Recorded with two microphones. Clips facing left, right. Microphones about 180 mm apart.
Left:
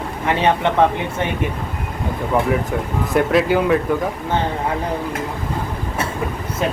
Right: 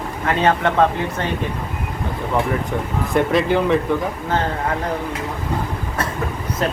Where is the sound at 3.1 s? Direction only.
Centre (ahead or behind).